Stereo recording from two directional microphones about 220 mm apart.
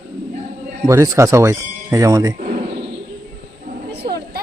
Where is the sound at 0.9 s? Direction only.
15° right (ahead or behind).